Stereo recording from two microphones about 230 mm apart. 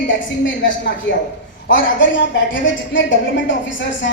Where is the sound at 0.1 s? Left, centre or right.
Left.